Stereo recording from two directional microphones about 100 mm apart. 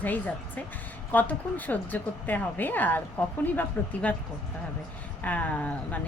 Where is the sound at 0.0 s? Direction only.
15° left (ahead or behind).